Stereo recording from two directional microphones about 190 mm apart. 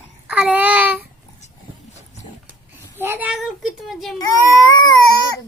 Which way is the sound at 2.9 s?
10° right (ahead or behind).